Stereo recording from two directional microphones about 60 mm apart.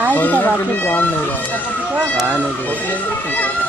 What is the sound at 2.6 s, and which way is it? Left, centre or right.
Speech, left.